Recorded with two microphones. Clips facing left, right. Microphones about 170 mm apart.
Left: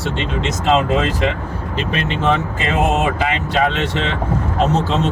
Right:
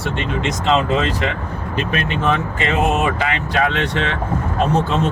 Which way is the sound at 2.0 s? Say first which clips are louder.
Left 2 dB; 25° left (ahead or behind).